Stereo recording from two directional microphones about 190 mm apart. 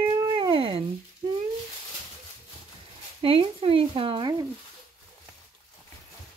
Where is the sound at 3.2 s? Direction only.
30° right (ahead or behind).